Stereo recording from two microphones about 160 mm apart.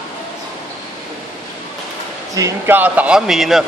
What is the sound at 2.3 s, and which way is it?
A man's voice, 15° right (ahead or behind).